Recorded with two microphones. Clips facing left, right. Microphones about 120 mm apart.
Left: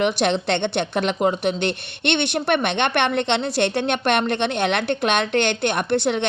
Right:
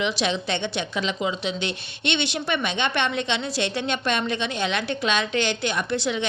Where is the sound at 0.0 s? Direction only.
60° left (ahead or behind).